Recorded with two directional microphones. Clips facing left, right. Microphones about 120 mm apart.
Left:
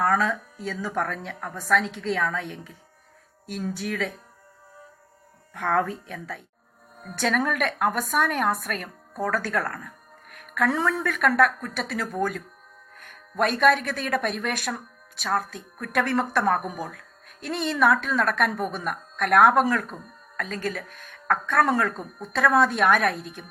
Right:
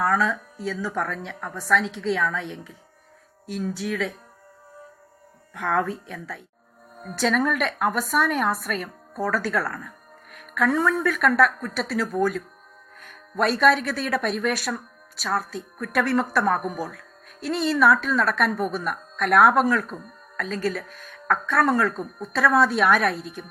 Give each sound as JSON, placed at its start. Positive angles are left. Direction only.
{"t": 0.0, "sound": "speech", "side_deg": 50}
{"t": 5.5, "sound": "speech", "side_deg": 50}
{"t": 13.4, "sound": "speech", "side_deg": 50}
{"t": 16.6, "sound": "speech", "side_deg": -5}
{"t": 16.9, "sound": "speech", "side_deg": 55}